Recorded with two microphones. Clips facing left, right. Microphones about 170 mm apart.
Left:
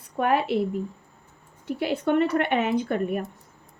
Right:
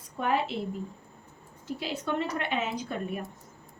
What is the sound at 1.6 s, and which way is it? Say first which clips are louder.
A woman's voice: left 8 dB; 60° left (ahead or behind).